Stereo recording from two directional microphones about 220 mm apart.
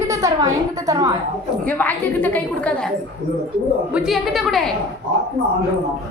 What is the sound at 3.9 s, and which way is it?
Speech, 5° right (ahead or behind).